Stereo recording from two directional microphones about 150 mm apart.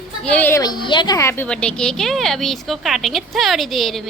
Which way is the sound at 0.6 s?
30° left (ahead or behind).